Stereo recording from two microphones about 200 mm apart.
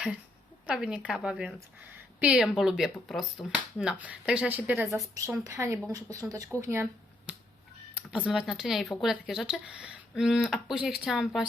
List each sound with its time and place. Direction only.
0.7 s speech: 5° right (ahead or behind)
5.1 s speech: 15° right (ahead or behind)
7.3 s finger snapping: 5° right (ahead or behind)
8.1 s speech: 5° right (ahead or behind)